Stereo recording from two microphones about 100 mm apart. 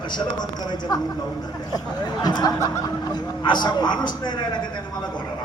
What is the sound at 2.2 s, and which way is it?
Speech, 45° left (ahead or behind).